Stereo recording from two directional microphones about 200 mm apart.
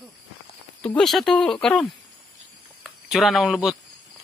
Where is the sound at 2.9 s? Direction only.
Centre (ahead or behind).